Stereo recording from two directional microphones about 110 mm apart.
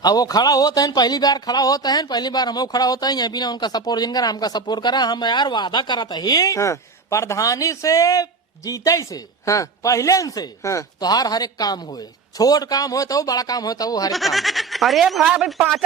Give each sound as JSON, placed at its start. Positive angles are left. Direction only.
{"t": 0.0, "sound": "speech", "side_deg": 35}
{"t": 14.1, "sound": "speech", "side_deg": 0}